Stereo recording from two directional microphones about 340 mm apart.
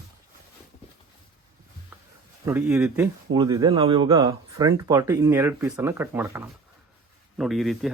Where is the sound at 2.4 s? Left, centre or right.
Centre.